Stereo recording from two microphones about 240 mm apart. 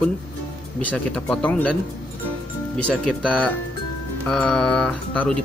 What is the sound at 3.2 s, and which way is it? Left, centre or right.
Speech, centre.